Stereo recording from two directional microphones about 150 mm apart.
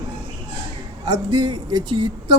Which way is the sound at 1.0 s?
30° right (ahead or behind).